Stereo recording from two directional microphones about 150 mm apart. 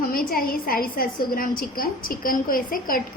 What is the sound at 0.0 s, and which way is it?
A woman's voice, 75° left (ahead or behind).